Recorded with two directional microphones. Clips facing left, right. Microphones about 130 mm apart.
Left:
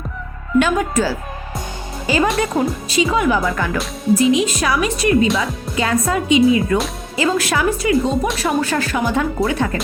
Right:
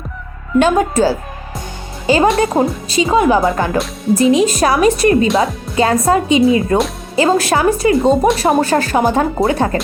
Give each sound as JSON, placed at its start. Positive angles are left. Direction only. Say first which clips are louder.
{"t": 0.6, "sound": "speech", "louder": "right 7 dB", "side_deg": -30}